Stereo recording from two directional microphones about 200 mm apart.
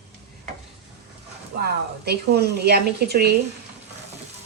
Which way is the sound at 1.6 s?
55° right (ahead or behind).